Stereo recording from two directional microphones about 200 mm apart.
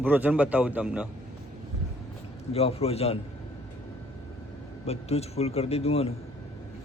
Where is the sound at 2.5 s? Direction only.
30° left (ahead or behind).